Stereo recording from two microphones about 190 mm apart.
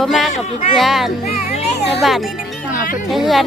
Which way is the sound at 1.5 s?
35° left (ahead or behind).